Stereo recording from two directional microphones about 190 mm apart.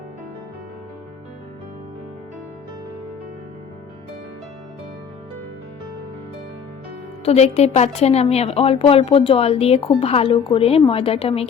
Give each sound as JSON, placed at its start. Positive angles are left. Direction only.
{"t": 7.3, "sound": "a woman's voice", "side_deg": 35}